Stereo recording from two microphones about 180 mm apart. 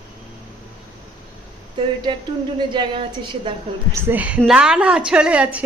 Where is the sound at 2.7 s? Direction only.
25° right (ahead or behind).